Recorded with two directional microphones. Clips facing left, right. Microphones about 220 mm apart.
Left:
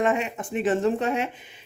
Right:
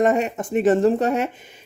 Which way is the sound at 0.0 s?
40° right (ahead or behind).